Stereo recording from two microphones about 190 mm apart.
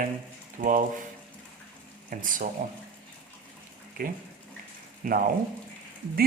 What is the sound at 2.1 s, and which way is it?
Speech, 45° right (ahead or behind).